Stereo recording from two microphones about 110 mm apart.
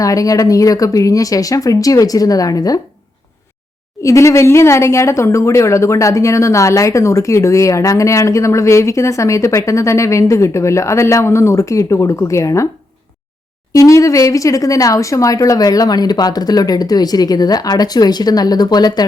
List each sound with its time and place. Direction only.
0.0 s speech: 30° left (ahead or behind)
4.0 s speech: 30° left (ahead or behind)
13.7 s speech: 30° left (ahead or behind)